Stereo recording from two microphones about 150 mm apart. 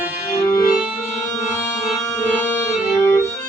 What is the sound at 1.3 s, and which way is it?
Music, 20° left (ahead or behind).